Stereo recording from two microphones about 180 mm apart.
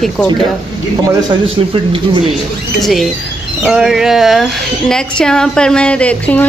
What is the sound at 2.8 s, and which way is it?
A woman's voice, centre (ahead or behind).